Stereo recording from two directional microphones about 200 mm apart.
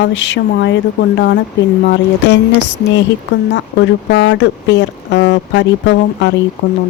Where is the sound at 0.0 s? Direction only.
65° left (ahead or behind).